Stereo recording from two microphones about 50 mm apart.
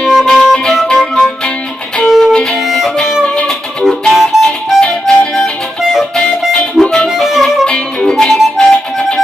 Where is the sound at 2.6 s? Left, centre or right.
Centre.